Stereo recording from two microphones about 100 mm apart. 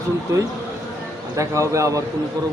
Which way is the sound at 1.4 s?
30° right (ahead or behind).